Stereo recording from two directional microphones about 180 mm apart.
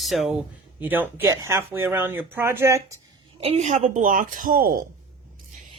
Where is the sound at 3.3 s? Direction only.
35° right (ahead or behind); by 4.8 s 50° right (ahead or behind).